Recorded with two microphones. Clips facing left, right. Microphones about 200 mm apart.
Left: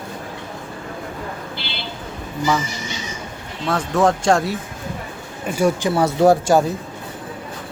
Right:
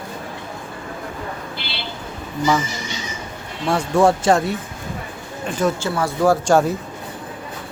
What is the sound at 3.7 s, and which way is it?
Speech, 10° right (ahead or behind).